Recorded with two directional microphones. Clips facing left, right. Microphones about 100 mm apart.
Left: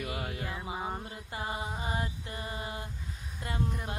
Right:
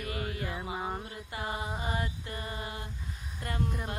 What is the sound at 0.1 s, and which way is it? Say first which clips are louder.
Music: right 1 dB; 25° left (ahead or behind).